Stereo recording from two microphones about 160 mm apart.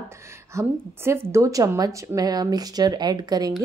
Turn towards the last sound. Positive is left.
turn(degrees=-25)  # may be behind; listen again after turning